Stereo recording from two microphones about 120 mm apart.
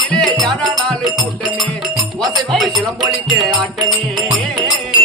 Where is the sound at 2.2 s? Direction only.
Centre (ahead or behind).